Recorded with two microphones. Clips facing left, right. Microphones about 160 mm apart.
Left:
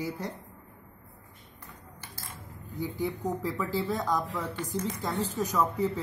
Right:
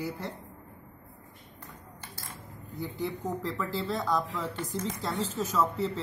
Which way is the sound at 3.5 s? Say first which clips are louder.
Left 2 dB; 15° left (ahead or behind).